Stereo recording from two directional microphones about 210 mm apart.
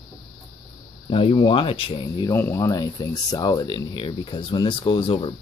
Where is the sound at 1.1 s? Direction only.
25° left (ahead or behind).